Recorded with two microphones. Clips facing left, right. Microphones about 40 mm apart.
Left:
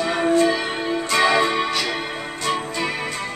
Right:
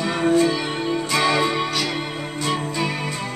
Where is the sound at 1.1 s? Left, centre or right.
Centre.